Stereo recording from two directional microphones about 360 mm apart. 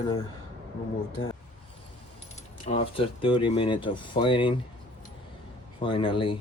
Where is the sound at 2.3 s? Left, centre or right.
Centre.